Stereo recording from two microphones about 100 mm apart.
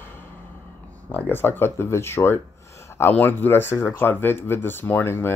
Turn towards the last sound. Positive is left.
turn(degrees=25)  # may be behind; listen again after turning